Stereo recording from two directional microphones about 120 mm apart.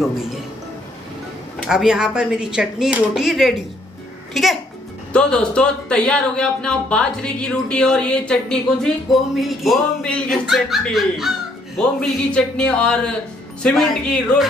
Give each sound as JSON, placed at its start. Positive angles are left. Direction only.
{"t": 1.7, "sound": "speech", "side_deg": -5}